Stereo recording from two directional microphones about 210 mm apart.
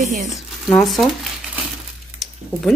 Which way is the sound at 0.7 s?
Centre (ahead or behind).